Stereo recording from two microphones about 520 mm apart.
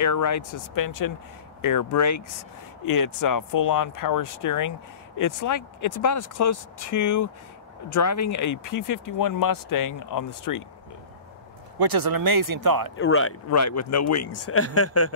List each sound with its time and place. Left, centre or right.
0.0 s speech: left
11.8 s speech: right
12.9 s speech: left